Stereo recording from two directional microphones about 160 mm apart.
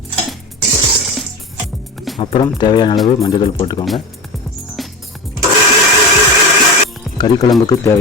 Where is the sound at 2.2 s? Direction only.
30° left (ahead or behind).